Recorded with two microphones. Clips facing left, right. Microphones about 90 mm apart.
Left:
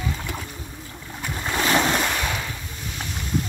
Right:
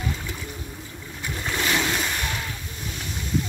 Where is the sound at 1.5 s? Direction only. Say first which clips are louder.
Left 4 dB; 40° left (ahead or behind).